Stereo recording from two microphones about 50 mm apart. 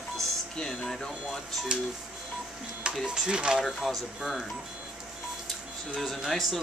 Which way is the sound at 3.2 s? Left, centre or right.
Centre.